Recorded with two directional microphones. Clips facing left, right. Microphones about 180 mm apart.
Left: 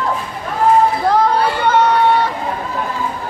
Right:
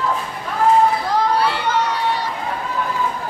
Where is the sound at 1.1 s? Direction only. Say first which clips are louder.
Left 6 dB; 60° left (ahead or behind).